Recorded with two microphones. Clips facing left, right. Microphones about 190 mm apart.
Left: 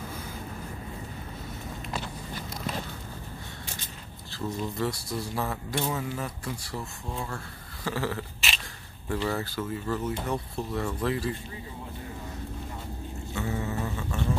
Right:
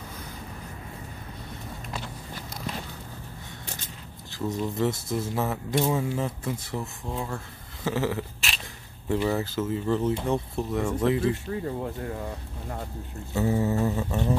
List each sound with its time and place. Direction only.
4.3 s speech: 20° right (ahead or behind)
7.8 s a sound: 20° right (ahead or behind)
9.1 s speech: 15° right (ahead or behind)
13.3 s mantra: 35° right (ahead or behind)